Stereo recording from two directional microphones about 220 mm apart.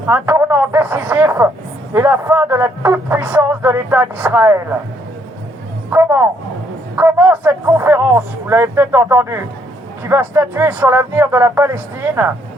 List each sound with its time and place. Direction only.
0.1 s speech: 10° right (ahead or behind)
5.9 s speech: 10° right (ahead or behind)